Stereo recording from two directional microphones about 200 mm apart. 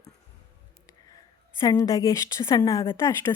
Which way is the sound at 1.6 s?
20° left (ahead or behind).